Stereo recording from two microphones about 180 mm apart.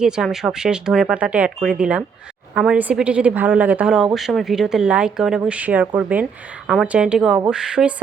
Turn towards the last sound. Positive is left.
turn(degrees=-5)  # may be behind; listen again after turning